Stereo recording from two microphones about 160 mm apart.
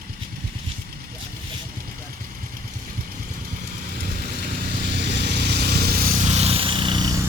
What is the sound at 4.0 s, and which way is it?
Vehicle, 65° right (ahead or behind).